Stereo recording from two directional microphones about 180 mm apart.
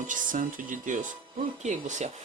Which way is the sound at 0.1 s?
45° right (ahead or behind).